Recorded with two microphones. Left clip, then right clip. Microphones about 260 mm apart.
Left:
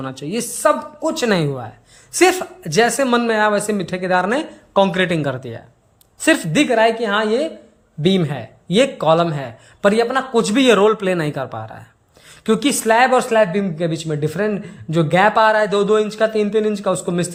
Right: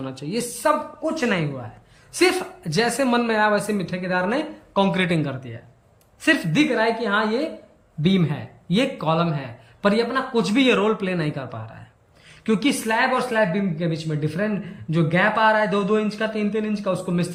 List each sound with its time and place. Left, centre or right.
0.0 s a man's voice: centre
1.0 s speech: left
2.1 s a man's voice: centre